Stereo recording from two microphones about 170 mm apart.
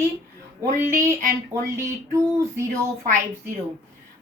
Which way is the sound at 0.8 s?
15° right (ahead or behind).